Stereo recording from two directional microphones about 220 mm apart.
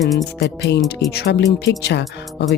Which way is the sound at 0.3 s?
50° left (ahead or behind).